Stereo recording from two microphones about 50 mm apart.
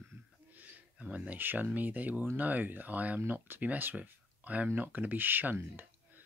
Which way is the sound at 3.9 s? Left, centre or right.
Right.